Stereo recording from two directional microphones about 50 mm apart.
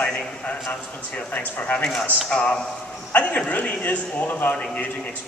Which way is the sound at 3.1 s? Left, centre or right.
Left.